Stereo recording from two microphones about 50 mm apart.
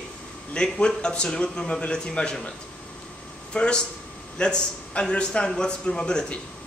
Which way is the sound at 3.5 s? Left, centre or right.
Left.